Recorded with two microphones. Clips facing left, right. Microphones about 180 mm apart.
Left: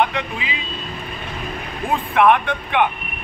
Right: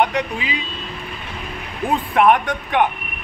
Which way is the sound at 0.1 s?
40° right (ahead or behind).